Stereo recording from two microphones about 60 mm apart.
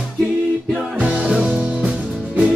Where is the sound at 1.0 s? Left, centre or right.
Centre.